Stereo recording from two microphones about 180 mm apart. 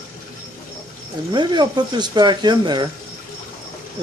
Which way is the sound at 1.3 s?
25° right (ahead or behind).